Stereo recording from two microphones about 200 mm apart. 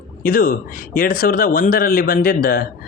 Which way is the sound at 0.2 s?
45° left (ahead or behind).